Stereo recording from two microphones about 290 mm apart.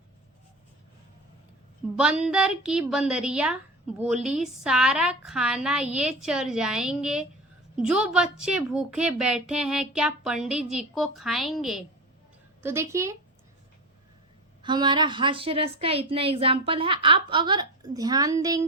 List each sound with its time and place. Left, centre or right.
2.0 s a woman's voice: centre
14.6 s a woman's voice: centre